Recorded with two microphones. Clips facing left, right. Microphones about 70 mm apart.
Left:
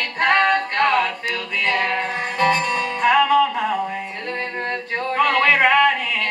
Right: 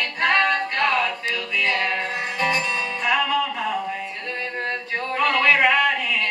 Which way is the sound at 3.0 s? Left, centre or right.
Left.